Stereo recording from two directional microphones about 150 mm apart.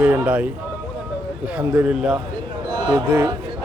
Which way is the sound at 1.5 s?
10° right (ahead or behind).